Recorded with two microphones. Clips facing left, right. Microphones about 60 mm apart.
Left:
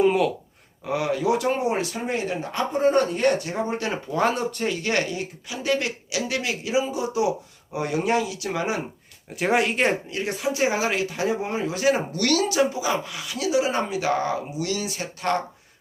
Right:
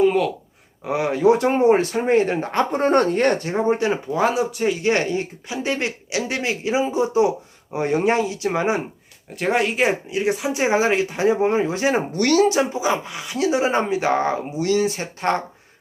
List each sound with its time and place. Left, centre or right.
0.0 s a sound: centre
0.9 s speech: right
3.8 s speech: right
4.1 s speech: centre
4.8 s speech: right
9.3 s speech: centre
10.1 s speech: centre